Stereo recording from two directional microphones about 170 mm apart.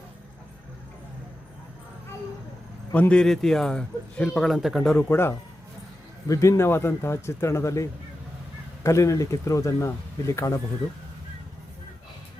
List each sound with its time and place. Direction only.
2.9 s speech: 5° left (ahead or behind)